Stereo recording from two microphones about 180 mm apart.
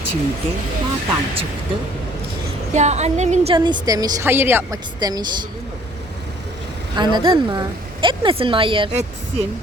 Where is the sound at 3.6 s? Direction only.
25° right (ahead or behind).